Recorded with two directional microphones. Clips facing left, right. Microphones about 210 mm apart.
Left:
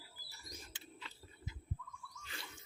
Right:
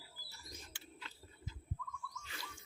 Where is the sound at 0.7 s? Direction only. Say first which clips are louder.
Left 1 dB; 20° left (ahead or behind).